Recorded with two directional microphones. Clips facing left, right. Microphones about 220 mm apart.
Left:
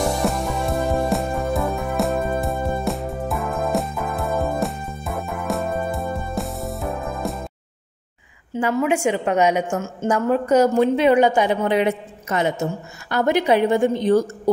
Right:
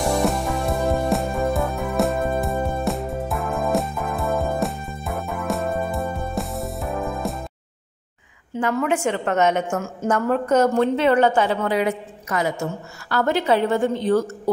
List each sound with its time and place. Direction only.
0.0 s music: centre (ahead or behind)
8.5 s a woman's voice: 10° left (ahead or behind)